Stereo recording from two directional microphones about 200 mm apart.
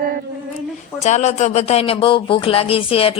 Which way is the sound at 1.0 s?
35° left (ahead or behind).